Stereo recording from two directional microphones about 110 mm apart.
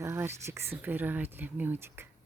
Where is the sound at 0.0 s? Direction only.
25° right (ahead or behind).